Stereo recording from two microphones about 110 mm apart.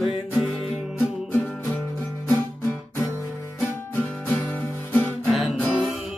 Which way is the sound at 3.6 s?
20° left (ahead or behind).